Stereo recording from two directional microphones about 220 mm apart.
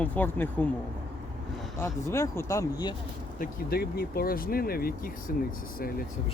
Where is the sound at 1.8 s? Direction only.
10° left (ahead or behind).